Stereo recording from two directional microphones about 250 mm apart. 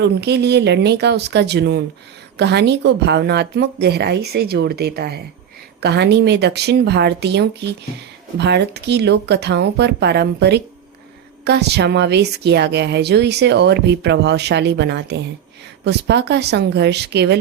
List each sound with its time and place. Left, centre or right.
0.0 s a woman's voice: right